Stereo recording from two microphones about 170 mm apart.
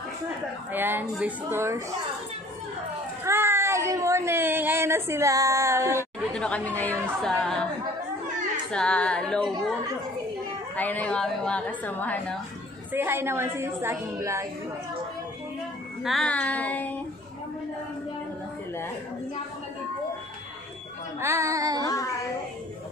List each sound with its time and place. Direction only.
0.7 s speech: 10° right (ahead or behind)
3.3 s speech: 15° right (ahead or behind)
6.3 s a woman's voice: 5° left (ahead or behind)
8.7 s speech: 5° left (ahead or behind)
10.8 s a woman's voice: 10° left (ahead or behind)
12.9 s speech: 15° right (ahead or behind)
16.0 s a woman's voice: centre (ahead or behind)
21.2 s child singing: 15° right (ahead or behind)
21.8 s child singing: 20° left (ahead or behind)